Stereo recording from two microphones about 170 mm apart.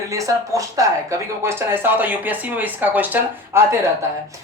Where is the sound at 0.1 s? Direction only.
20° right (ahead or behind).